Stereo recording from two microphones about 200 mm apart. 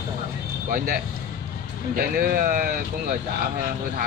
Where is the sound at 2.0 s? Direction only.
45° right (ahead or behind).